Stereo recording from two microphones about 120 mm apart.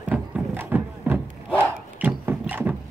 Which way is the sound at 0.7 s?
15° right (ahead or behind).